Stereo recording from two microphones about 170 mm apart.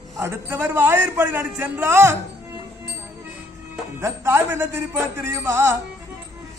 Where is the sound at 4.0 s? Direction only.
15° right (ahead or behind).